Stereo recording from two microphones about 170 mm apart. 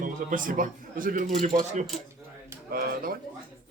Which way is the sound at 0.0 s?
50° right (ahead or behind).